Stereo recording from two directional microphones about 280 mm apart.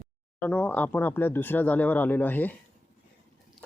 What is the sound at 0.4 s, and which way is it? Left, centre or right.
Speech, centre.